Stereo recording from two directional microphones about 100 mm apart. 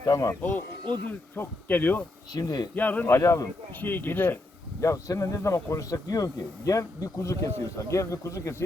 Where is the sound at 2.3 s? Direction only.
40° left (ahead or behind).